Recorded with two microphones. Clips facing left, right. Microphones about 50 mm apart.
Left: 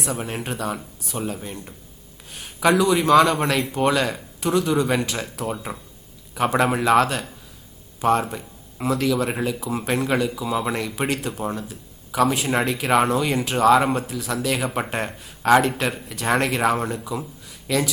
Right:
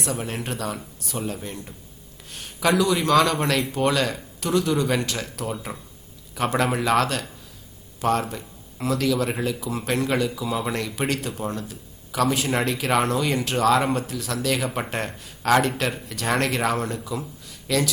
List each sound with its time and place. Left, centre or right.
0.0 s speech: centre